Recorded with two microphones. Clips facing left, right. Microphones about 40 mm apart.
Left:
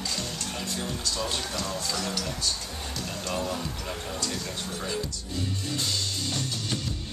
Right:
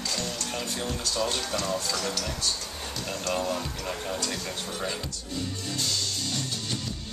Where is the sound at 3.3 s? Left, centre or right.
Centre.